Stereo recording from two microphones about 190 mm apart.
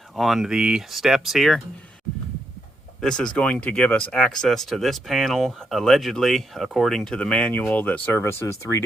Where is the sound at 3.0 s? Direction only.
5° left (ahead or behind).